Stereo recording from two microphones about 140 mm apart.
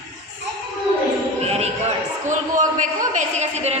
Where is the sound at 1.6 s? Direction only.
55° right (ahead or behind).